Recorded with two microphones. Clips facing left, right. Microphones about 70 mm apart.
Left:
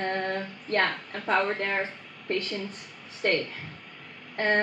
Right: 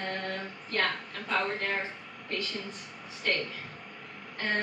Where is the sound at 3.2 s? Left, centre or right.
Left.